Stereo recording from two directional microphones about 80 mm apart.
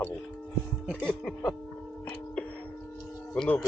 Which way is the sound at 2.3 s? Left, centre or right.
Centre.